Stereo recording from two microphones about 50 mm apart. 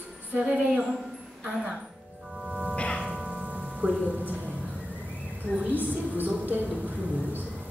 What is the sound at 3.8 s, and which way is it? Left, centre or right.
Speech, right.